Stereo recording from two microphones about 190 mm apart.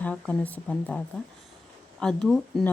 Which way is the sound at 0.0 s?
5° left (ahead or behind).